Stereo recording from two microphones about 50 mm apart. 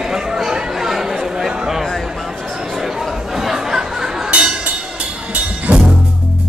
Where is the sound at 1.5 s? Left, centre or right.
Centre.